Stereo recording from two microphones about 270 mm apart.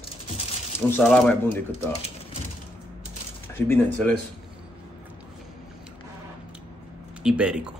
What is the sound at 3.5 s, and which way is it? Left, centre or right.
Speech, centre.